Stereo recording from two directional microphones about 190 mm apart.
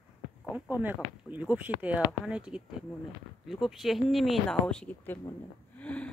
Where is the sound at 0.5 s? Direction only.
10° right (ahead or behind); by 5.2 s 5° left (ahead or behind).